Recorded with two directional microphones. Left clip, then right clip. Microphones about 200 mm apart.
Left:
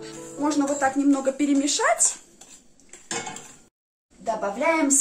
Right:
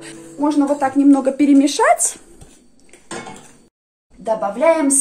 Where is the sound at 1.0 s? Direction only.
35° right (ahead or behind).